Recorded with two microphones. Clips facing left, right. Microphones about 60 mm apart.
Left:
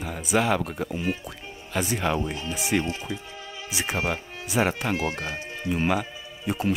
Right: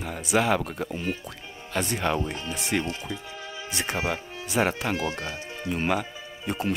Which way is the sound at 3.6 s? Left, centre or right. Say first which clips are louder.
Left 1 dB; centre.